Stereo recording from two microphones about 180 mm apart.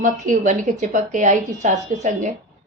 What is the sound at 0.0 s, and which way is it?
A woman's voice, 45° right (ahead or behind).